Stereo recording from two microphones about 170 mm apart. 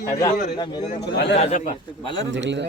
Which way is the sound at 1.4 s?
45° left (ahead or behind).